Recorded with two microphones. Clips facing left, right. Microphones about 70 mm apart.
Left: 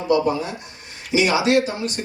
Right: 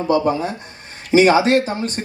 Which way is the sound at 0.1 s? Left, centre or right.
Right.